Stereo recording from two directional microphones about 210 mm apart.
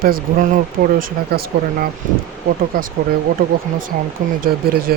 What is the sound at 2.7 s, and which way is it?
Speech, 40° right (ahead or behind).